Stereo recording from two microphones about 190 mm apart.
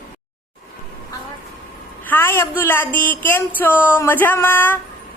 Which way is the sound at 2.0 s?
10° left (ahead or behind).